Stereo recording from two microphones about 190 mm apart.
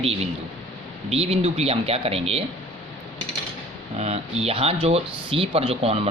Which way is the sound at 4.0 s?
35° right (ahead or behind).